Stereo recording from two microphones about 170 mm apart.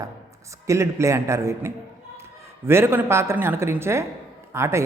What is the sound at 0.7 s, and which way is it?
A man's voice, 15° right (ahead or behind).